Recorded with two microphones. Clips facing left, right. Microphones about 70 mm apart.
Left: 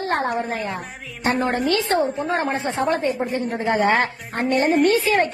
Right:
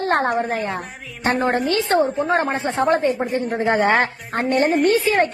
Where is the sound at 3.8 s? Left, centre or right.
Right.